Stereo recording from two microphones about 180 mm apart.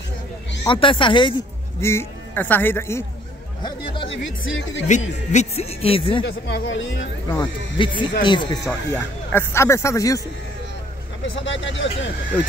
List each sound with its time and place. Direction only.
0.7 s speech: 30° left (ahead or behind)
1.8 s a man's voice: 15° left (ahead or behind)
3.6 s speech: 30° left (ahead or behind)
4.5 s speech: 90° left
4.8 s speech: 40° left (ahead or behind)
6.2 s speech: 90° left
7.2 s speech: 25° left (ahead or behind)
8.9 s speech: 15° left (ahead or behind)
11.2 s speech: 90° left